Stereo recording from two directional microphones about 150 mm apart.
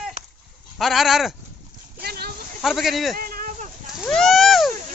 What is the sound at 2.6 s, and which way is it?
Speech, centre (ahead or behind).